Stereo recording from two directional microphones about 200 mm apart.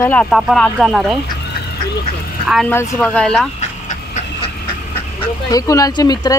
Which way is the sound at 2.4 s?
Centre (ahead or behind).